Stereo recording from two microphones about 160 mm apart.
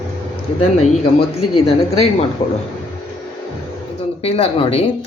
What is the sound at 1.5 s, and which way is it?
Speech, 40° left (ahead or behind).